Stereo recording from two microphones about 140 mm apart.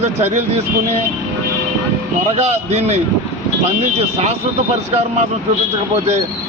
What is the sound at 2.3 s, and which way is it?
Speech, 50° right (ahead or behind).